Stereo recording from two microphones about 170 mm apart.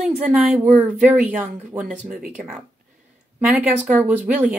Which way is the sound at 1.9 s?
55° right (ahead or behind).